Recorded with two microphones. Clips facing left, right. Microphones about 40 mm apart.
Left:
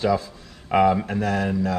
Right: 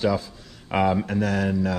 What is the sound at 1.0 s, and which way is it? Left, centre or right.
Speech, centre.